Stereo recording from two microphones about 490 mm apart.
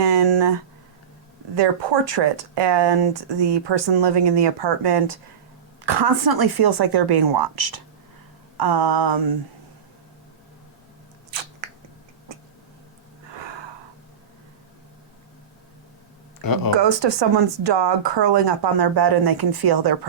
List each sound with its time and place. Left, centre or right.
0.0 s a sound: right
1.5 s a woman's voice: right
16.4 s speech: left
16.7 s speech: right